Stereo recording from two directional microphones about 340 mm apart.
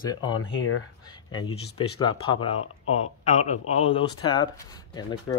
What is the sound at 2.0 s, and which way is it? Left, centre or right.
A man's voice, centre.